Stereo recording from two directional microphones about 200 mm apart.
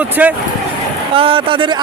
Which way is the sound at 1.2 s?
25° right (ahead or behind).